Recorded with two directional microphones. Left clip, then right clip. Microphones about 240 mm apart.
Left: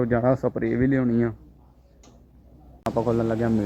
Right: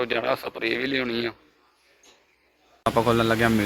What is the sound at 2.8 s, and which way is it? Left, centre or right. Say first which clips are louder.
Speech: right 3 dB; right.